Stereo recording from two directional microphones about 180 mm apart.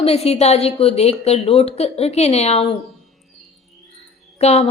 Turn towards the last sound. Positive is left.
turn(degrees=35)  # may be behind; listen again after turning